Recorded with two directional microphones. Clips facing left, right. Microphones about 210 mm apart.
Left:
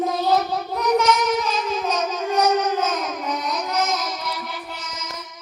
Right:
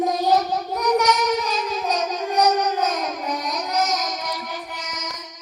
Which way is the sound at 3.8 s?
40° right (ahead or behind).